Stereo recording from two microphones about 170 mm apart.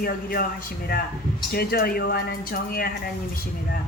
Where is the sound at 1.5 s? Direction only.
65° left (ahead or behind).